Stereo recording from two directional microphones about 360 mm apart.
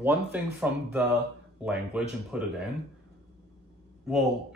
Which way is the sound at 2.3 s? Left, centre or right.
Centre.